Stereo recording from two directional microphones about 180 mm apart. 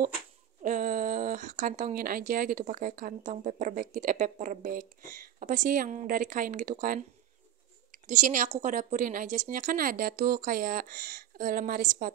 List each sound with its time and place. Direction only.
0.6 s speech: 45° right (ahead or behind)
8.1 s speech: 45° right (ahead or behind)